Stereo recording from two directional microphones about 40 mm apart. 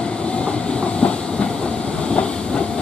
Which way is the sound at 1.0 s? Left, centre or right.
Left.